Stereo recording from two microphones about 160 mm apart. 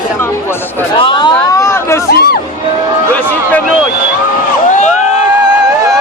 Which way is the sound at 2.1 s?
75° left (ahead or behind).